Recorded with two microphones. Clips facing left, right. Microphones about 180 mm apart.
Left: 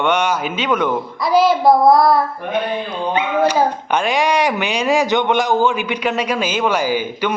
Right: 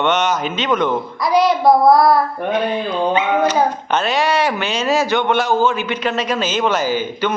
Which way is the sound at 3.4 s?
10° left (ahead or behind).